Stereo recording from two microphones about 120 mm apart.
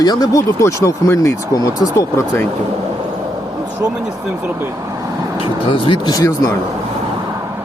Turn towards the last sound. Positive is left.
turn(degrees=30)  # may be behind; listen again after turning